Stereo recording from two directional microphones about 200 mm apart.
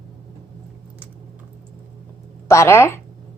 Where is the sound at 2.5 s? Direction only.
15° left (ahead or behind).